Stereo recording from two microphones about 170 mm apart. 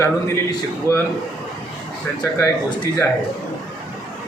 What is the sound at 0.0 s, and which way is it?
A man's voice, 15° left (ahead or behind).